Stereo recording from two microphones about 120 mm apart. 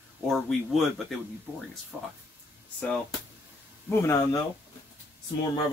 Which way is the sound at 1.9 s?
10° right (ahead or behind).